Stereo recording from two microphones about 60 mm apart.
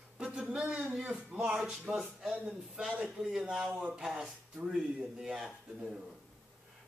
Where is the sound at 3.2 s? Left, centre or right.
Centre.